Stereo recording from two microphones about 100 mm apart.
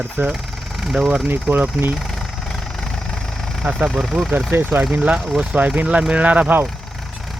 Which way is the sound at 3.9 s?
Centre (ahead or behind).